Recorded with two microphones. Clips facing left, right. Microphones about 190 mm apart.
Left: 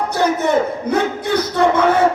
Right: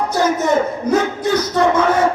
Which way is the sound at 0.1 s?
60° left (ahead or behind).